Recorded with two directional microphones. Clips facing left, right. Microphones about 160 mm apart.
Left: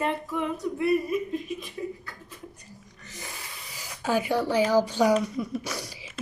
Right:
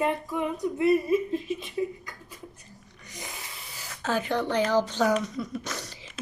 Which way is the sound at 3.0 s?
15° right (ahead or behind).